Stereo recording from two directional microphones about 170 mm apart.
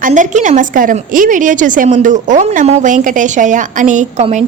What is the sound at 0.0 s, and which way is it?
A woman's voice, 45° right (ahead or behind).